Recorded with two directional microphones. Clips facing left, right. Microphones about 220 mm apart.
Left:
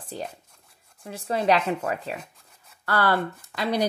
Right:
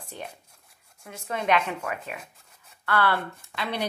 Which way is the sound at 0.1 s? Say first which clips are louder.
Left 5 dB; 35° left (ahead or behind).